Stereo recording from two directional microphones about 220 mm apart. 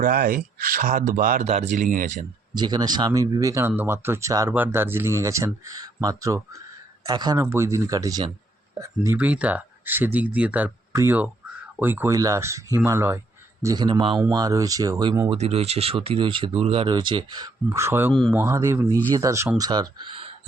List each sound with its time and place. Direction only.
0.0 s speech: 40° right (ahead or behind)
2.6 s speech: 20° right (ahead or behind)
15.3 s speech: 30° right (ahead or behind); by 18.1 s 10° right (ahead or behind)
18.1 s speech: centre (ahead or behind)
18.3 s speech: 10° right (ahead or behind)